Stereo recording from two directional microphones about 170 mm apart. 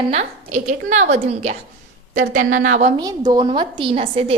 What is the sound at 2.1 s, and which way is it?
Speech, 50° right (ahead or behind).